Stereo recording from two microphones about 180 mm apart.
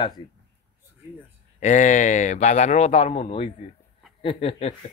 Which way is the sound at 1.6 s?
45° left (ahead or behind).